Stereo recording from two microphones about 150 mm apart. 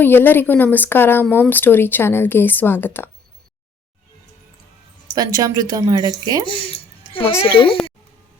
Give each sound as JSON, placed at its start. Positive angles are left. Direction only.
{"t": 0.0, "sound": "speech", "side_deg": 15}
{"t": 5.1, "sound": "speech", "side_deg": -25}
{"t": 6.4, "sound": "speech", "side_deg": 35}